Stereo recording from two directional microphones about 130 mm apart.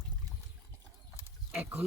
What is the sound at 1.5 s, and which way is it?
Speech, 15° right (ahead or behind).